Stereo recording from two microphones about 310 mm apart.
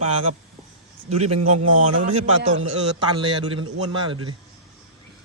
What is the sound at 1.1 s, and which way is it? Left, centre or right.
Speech, right.